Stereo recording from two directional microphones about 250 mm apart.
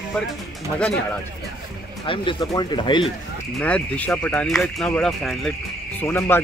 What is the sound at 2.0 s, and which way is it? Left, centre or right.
Speech, centre.